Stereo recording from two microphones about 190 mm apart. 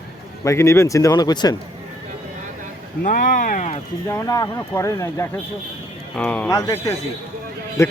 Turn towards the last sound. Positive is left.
turn(degrees=15)  # may be behind; listen again after turning